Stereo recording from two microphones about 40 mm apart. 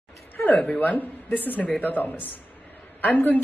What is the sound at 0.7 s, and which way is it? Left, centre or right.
Speech, left.